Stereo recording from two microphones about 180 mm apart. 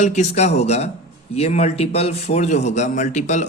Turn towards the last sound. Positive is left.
turn(degrees=40)  # may be behind; listen again after turning